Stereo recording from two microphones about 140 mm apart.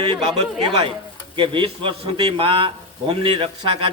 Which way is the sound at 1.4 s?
35° right (ahead or behind).